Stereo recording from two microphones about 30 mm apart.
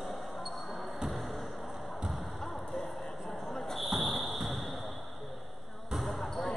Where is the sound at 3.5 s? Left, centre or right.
Centre.